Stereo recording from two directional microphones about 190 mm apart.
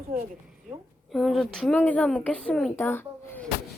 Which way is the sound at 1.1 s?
Centre (ahead or behind).